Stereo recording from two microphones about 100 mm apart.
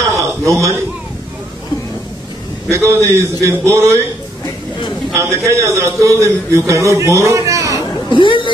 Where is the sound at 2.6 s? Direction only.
30° right (ahead or behind).